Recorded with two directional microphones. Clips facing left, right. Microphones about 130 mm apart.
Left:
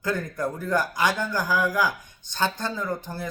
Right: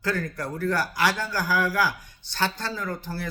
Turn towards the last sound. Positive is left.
turn(degrees=20)  # may be behind; listen again after turning